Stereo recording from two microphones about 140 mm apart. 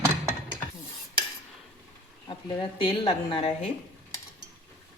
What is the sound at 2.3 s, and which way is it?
Speech, 35° left (ahead or behind).